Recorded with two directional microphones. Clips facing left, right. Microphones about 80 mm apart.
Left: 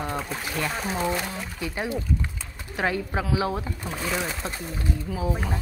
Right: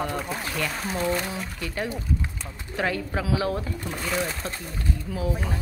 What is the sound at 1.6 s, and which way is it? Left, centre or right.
Speech, centre.